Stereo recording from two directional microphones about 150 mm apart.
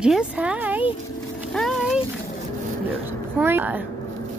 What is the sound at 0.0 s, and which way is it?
Speech, 5° right (ahead or behind).